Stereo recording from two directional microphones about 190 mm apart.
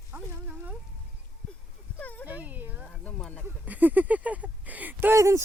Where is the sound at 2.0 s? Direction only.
5° left (ahead or behind).